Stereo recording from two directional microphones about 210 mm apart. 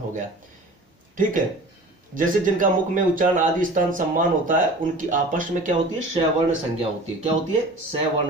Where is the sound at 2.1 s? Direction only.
40° right (ahead or behind).